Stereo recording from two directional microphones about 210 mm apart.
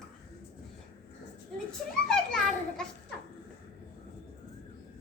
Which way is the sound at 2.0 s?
5° left (ahead or behind).